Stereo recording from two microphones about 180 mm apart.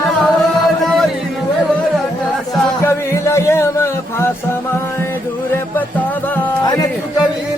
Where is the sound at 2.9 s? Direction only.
15° left (ahead or behind).